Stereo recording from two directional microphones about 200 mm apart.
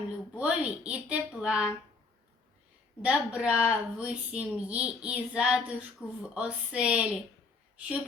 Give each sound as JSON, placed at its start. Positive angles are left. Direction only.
{"t": 0.3, "sound": "a woman's voice", "side_deg": -5}
{"t": 3.0, "sound": "a woman's voice", "side_deg": -5}